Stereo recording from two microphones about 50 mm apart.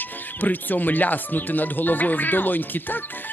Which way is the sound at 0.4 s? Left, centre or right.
Left.